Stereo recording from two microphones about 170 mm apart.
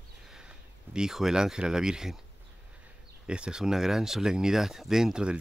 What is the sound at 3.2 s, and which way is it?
Speech, 5° right (ahead or behind).